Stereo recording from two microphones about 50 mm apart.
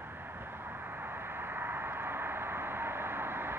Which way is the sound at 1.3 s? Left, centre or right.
Right.